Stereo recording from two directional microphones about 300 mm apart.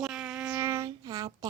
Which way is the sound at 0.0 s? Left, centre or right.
Centre.